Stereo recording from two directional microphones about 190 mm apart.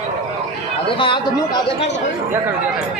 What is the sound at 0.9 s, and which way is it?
Speech, 25° left (ahead or behind).